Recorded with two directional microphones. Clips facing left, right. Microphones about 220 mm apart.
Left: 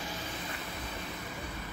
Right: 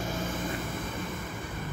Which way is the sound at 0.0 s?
50° right (ahead or behind).